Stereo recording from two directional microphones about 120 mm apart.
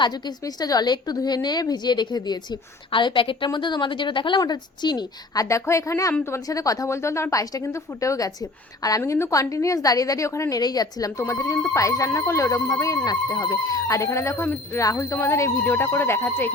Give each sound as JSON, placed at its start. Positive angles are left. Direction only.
{"t": 0.0, "sound": "a woman's voice", "side_deg": 35}